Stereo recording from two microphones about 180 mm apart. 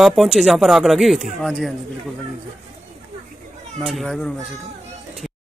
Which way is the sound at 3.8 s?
Centre (ahead or behind).